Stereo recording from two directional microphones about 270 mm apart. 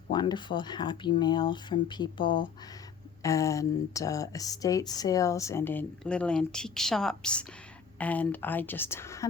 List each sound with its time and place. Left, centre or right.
0.1 s speech: centre